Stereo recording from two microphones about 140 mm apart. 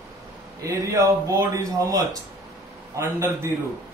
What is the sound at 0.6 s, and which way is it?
Speech, 20° right (ahead or behind).